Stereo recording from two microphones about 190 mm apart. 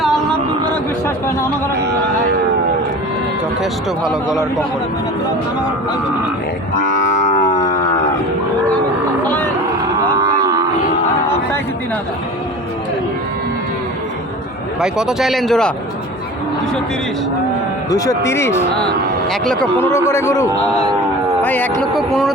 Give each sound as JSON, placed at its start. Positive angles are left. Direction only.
{"t": 0.0, "sound": "a sound", "side_deg": 0}
{"t": 3.6, "sound": "speech", "side_deg": 0}
{"t": 6.9, "sound": "livestock", "side_deg": 40}
{"t": 9.2, "sound": "a sound", "side_deg": 10}
{"t": 14.8, "sound": "speech", "side_deg": -5}
{"t": 17.9, "sound": "speech", "side_deg": 15}
{"t": 21.9, "sound": "speech", "side_deg": 0}